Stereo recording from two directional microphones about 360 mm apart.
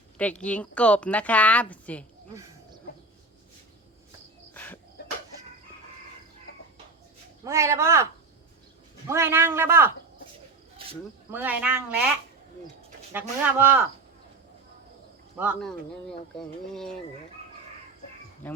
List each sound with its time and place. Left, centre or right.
0.2 s speech: centre
4.5 s cricket: centre
5.0 s a sound: left
7.4 s a man's voice: centre
9.0 s a man's voice: centre
13.1 s speech: centre
15.4 s speech: centre
18.4 s speech: centre